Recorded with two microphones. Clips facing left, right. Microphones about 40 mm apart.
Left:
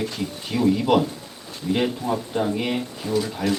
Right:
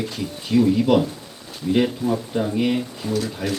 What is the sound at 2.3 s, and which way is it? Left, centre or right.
Speech, centre.